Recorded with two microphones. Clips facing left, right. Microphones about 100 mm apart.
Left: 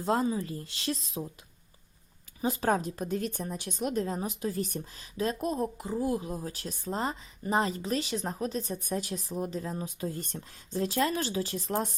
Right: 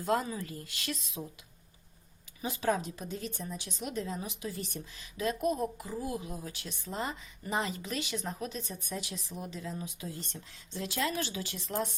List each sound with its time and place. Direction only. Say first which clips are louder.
0.0 s a woman's voice: left 3 dB; 25° left (ahead or behind)
2.4 s a woman's voice: left 4 dB; 40° left (ahead or behind)